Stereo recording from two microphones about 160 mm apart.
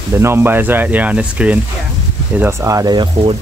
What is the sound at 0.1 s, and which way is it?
Speech, 15° right (ahead or behind).